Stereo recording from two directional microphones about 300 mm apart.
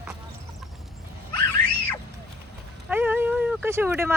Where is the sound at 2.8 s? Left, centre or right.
Centre.